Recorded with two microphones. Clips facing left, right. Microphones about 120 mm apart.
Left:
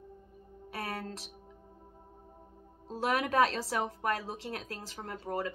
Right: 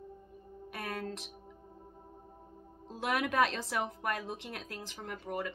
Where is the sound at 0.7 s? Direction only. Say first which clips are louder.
Left 1 dB; 30° left (ahead or behind).